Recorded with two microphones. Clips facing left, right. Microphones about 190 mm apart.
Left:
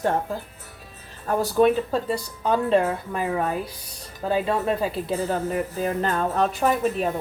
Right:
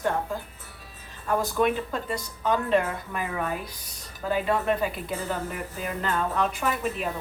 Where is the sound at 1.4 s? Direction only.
30° left (ahead or behind).